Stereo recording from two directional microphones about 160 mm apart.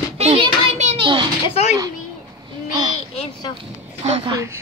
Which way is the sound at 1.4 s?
35° left (ahead or behind).